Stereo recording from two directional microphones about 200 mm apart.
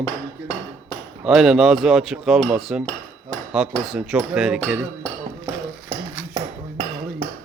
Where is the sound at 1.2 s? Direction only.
5° right (ahead or behind).